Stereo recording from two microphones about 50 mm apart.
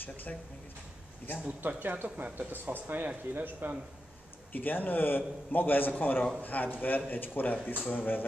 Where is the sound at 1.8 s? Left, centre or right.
Right.